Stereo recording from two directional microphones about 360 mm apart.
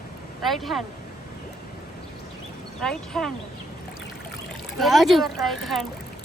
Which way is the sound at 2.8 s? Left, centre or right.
Centre.